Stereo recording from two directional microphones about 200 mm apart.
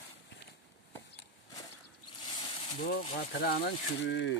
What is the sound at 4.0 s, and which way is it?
Speech, 60° left (ahead or behind).